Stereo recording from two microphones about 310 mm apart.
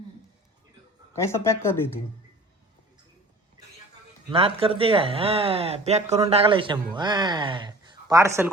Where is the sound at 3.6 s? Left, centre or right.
Centre.